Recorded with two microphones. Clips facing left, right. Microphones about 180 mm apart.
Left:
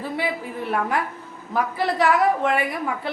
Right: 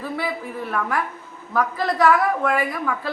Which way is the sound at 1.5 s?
15° left (ahead or behind).